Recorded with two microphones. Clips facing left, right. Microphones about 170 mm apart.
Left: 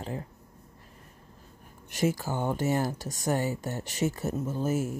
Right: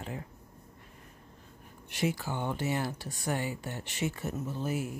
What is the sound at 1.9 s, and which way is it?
Speech, 45° left (ahead or behind).